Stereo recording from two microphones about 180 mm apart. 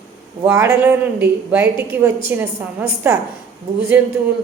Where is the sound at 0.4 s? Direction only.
15° right (ahead or behind).